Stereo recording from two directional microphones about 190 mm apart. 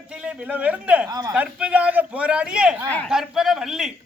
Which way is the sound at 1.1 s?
20° right (ahead or behind).